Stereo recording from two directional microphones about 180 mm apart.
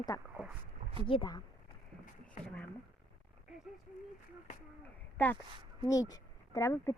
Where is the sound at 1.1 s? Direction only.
25° left (ahead or behind).